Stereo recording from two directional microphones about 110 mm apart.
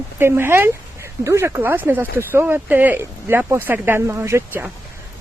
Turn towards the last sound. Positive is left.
turn(degrees=-25)  # may be behind; listen again after turning